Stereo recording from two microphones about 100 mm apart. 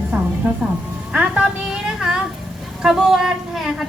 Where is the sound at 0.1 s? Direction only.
15° right (ahead or behind).